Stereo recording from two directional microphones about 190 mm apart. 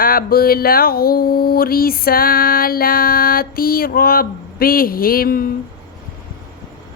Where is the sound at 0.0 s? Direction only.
50° left (ahead or behind).